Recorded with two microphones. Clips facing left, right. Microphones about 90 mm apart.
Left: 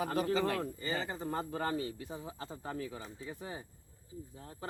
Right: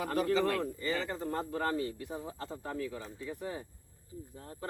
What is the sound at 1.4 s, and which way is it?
Speech, 50° right (ahead or behind).